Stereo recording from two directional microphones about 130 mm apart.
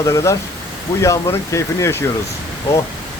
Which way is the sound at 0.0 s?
20° left (ahead or behind).